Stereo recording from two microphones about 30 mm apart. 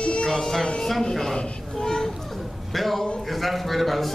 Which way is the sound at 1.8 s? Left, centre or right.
Centre.